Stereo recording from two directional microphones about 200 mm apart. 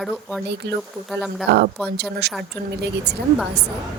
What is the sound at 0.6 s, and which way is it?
Speech, 55° right (ahead or behind).